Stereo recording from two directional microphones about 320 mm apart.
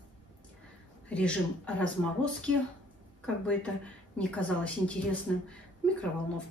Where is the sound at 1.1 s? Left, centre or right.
Centre.